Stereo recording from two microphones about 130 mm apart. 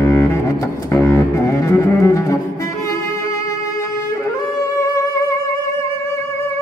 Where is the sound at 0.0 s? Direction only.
20° left (ahead or behind).